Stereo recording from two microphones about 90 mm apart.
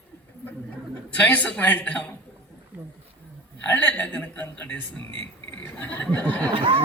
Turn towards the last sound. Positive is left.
turn(degrees=-75)  # may be behind; listen again after turning